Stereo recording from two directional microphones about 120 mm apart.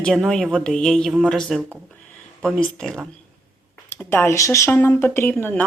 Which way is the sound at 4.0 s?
15° left (ahead or behind).